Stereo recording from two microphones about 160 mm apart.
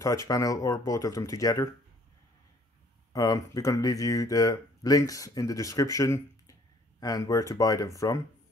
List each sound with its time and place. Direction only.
0.0 s speech: 20° left (ahead or behind)
3.1 s speech: 20° left (ahead or behind)